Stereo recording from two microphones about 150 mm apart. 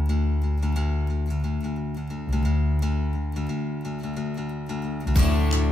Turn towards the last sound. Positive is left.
turn(degrees=0)  # may be behind; listen again after turning